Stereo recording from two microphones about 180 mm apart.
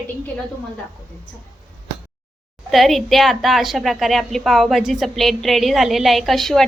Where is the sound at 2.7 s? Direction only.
Centre (ahead or behind).